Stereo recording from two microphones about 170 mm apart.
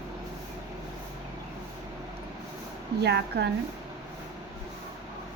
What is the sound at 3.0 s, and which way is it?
Speech, 80° right.